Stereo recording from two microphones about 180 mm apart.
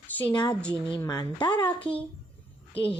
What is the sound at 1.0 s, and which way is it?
Speech, 20° left (ahead or behind).